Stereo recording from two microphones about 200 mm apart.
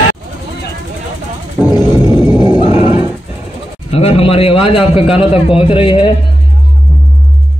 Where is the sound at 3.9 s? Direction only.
30° left (ahead or behind).